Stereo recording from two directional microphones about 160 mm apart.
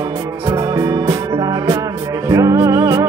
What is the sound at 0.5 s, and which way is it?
Music, 20° right (ahead or behind).